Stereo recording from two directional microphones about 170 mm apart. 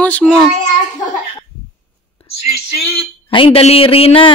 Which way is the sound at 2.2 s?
35° left (ahead or behind).